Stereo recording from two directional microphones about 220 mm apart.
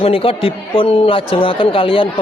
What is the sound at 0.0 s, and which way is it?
Speech, 25° left (ahead or behind).